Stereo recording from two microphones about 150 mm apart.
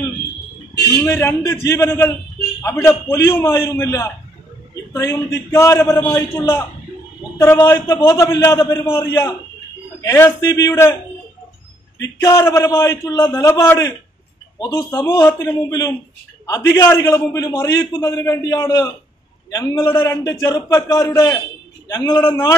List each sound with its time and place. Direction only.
1.0 s a man's voice: 15° left (ahead or behind)
12.0 s a man's voice: 25° left (ahead or behind)